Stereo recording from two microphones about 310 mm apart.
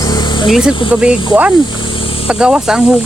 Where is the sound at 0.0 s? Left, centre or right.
Centre.